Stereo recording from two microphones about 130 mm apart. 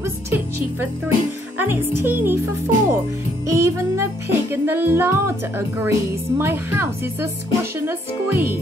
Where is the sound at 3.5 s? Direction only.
25° right (ahead or behind).